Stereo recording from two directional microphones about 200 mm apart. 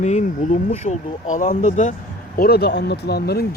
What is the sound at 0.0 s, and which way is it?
Speech, 35° left (ahead or behind).